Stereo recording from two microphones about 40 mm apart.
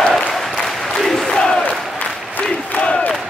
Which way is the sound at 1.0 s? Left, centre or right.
Centre.